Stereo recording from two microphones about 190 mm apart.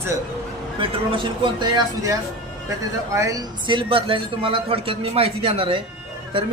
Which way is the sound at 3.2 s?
20° right (ahead or behind).